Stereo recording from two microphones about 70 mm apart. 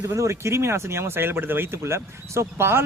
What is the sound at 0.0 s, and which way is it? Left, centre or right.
Speech, right.